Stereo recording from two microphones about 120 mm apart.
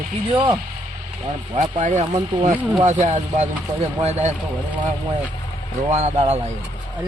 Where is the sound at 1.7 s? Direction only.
90° right.